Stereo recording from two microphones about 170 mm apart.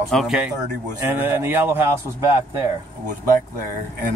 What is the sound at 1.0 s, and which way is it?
Speech, 10° right (ahead or behind).